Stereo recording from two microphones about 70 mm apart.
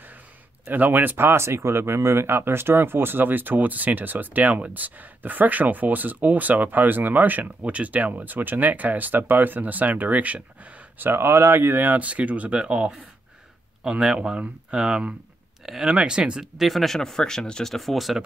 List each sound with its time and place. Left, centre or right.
0.7 s speech: right
11.1 s speech: right; by 16.4 s centre
16.5 s speech: centre